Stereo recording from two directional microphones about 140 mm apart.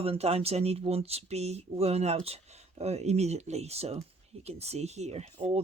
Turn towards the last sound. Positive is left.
turn(degrees=-50)  # may be behind; listen again after turning